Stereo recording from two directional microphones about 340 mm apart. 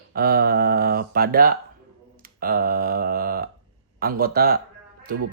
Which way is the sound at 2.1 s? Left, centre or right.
Right.